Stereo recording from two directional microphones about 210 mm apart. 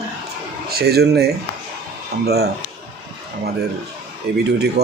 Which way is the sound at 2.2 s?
50° right (ahead or behind).